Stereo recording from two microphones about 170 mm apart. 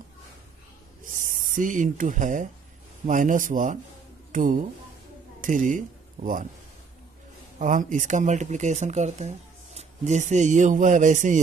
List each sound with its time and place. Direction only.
1.0 s speech: 50° right (ahead or behind)
7.5 s speech: 50° right (ahead or behind)